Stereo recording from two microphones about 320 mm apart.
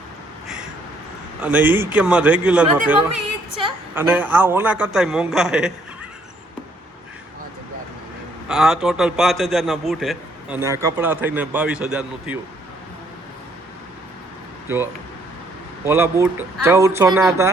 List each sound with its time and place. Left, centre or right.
1.4 s a man's voice: centre
8.4 s a man's voice: centre
14.7 s speech: centre